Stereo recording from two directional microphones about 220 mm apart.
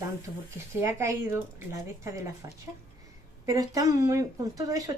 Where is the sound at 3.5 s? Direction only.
15° right (ahead or behind).